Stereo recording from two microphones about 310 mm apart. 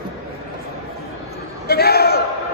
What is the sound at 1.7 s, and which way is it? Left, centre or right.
Crowd, left.